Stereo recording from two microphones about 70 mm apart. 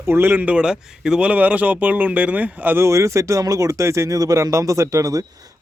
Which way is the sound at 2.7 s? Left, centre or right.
Right.